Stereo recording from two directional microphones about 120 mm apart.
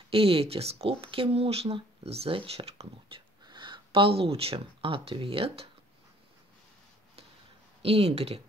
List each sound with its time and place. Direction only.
0.1 s speech: 50° right (ahead or behind)
3.4 s speech: 40° right (ahead or behind)
7.8 s speech: 60° right (ahead or behind)